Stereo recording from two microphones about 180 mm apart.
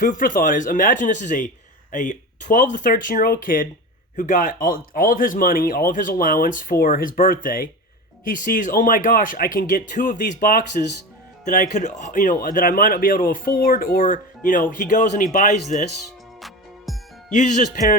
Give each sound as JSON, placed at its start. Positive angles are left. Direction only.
{"t": 0.0, "sound": "speech", "side_deg": 50}
{"t": 16.4, "sound": "music", "side_deg": 0}
{"t": 17.3, "sound": "speech", "side_deg": 40}